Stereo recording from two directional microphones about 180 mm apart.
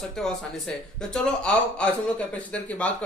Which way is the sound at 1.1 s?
5° left (ahead or behind).